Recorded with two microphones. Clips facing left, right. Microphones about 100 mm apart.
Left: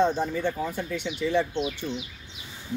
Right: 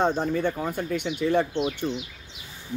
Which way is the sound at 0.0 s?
55° right (ahead or behind).